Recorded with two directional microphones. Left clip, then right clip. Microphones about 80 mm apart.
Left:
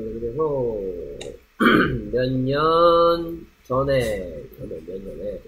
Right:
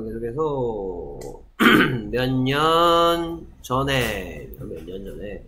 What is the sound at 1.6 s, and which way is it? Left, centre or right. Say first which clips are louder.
Throat clearing: right 1 dB; right.